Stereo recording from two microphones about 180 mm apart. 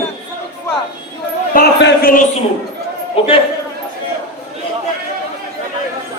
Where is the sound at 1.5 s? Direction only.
70° left (ahead or behind).